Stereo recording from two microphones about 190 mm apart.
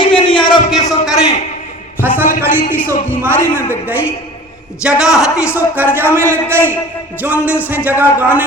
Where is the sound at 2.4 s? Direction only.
10° right (ahead or behind).